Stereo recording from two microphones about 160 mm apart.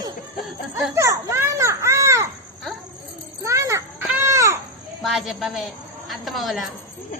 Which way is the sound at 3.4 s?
20° right (ahead or behind).